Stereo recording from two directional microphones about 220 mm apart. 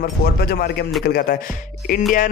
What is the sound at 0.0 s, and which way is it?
Speech, 45° left (ahead or behind).